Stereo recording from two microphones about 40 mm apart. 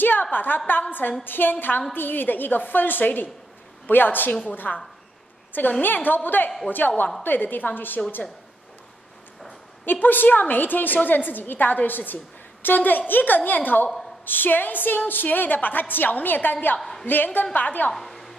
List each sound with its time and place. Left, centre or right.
0.0 s a woman's voice: left
5.8 s a woman's voice: left
9.8 s a woman's voice: left
17.9 s a sound: centre